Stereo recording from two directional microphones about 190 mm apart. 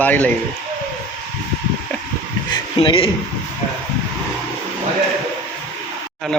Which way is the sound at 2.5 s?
25° left (ahead or behind).